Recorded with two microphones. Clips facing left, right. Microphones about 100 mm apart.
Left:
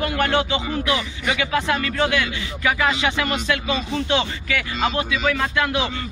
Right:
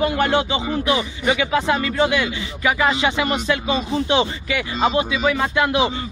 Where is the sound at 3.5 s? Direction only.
30° right (ahead or behind).